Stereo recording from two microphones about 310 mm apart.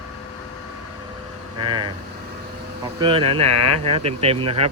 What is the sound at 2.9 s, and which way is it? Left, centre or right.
Speech, centre.